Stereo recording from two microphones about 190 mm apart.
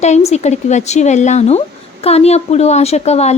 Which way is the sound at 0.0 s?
35° left (ahead or behind).